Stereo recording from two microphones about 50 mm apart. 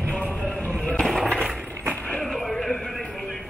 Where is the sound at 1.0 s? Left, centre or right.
Centre.